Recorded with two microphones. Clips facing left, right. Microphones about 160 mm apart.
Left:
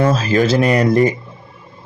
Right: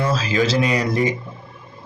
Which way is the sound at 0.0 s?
50° left (ahead or behind).